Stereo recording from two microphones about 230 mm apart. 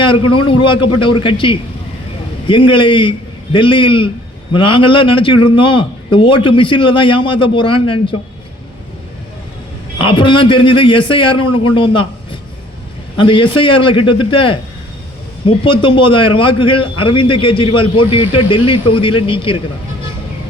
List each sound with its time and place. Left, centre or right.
0.4 s a man's voice: left
10.0 s a man's voice: left
11.3 s a man's voice: left
11.7 s a man's voice: left